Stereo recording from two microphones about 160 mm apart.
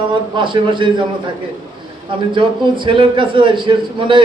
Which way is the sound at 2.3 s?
30° right (ahead or behind).